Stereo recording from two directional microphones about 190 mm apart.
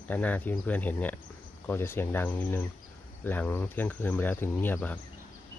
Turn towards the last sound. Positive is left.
turn(degrees=10)  # may be behind; listen again after turning